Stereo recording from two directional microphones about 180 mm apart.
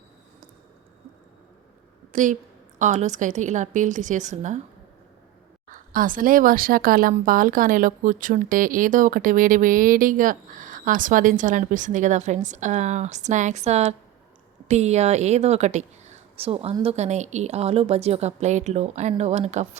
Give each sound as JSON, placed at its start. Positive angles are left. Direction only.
{"t": 2.1, "sound": "speech", "side_deg": -45}
{"t": 5.7, "sound": "a woman's voice", "side_deg": -50}